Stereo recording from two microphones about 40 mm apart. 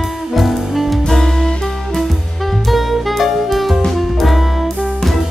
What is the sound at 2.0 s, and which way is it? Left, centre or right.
Music, centre.